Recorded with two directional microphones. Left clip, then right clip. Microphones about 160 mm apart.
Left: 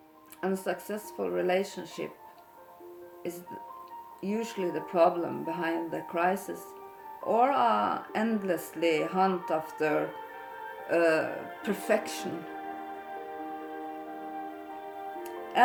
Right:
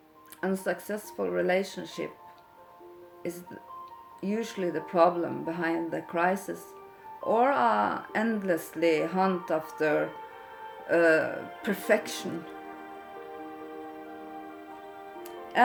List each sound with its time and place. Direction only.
0.4 s speech: 30° right (ahead or behind)
4.2 s speech: 25° right (ahead or behind)
15.3 s music: 15° left (ahead or behind)